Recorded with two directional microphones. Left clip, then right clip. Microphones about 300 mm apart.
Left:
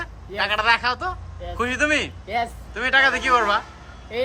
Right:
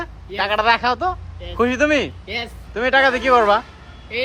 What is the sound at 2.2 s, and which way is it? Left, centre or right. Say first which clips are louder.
Speech: left 2 dB; left.